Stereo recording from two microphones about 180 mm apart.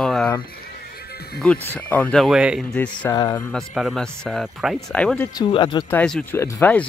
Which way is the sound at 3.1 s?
20° left (ahead or behind).